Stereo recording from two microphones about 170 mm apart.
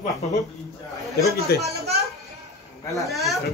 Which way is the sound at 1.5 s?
70° left (ahead or behind).